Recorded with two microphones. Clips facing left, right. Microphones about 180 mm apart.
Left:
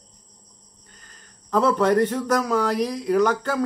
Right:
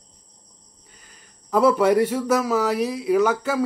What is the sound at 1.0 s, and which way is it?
Speech, 10° right (ahead or behind).